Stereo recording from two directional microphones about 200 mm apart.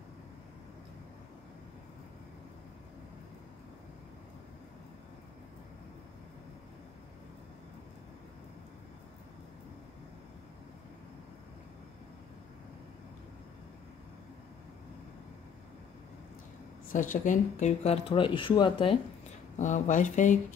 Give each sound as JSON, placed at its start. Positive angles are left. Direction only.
{"t": 16.9, "sound": "speech", "side_deg": 40}
{"t": 19.6, "sound": "speech", "side_deg": 40}